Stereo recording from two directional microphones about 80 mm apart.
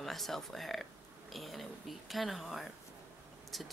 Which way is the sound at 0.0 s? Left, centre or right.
Centre.